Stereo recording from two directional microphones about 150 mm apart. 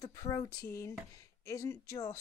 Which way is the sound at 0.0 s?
25° left (ahead or behind).